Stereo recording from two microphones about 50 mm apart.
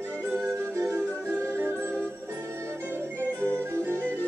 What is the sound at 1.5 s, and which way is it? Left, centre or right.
Music, right.